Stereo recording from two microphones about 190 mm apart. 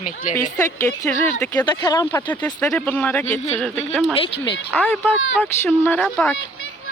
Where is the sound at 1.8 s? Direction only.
20° left (ahead or behind).